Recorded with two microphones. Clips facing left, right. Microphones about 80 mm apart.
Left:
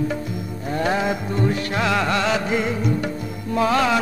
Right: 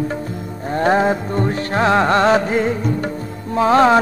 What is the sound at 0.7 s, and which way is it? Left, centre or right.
Music, right.